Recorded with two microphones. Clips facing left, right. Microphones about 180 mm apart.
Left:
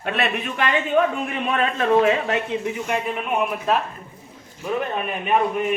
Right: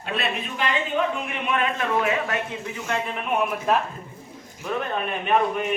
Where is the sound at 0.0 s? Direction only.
65° left (ahead or behind).